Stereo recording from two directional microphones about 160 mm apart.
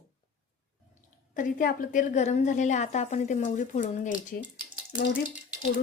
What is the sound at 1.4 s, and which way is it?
A woman's voice, 55° left (ahead or behind).